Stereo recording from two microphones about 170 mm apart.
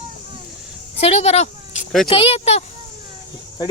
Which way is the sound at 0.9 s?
40° left (ahead or behind).